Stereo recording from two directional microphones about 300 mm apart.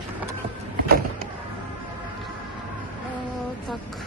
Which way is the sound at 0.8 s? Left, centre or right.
Right.